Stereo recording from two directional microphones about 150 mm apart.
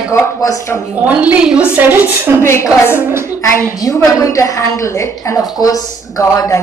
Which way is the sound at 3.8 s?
20° left (ahead or behind).